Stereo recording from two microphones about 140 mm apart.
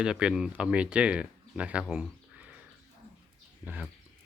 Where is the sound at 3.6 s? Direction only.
10° right (ahead or behind).